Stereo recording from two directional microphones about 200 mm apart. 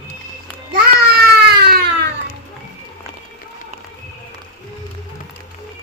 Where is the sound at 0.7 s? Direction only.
55° right (ahead or behind).